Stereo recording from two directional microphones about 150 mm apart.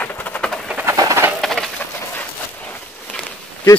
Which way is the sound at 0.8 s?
20° right (ahead or behind).